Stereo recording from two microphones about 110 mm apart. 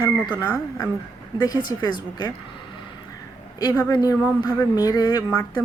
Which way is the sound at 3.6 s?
35° left (ahead or behind).